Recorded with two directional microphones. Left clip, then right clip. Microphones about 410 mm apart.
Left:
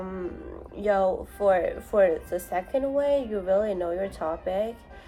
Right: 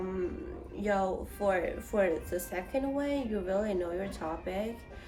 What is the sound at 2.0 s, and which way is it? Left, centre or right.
A woman's voice, centre.